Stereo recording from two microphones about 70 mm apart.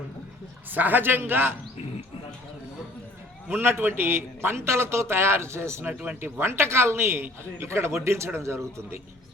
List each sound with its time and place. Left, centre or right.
0.7 s a man's voice: right
3.5 s a man's voice: right
5.9 s a man's voice: right